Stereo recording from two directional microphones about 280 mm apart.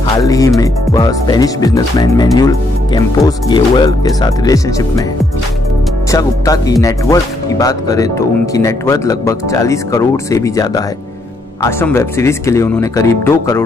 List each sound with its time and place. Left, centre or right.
0.0 s speech: centre
6.1 s speech: centre